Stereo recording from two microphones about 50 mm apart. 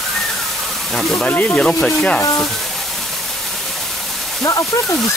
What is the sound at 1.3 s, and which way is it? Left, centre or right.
Speech, left.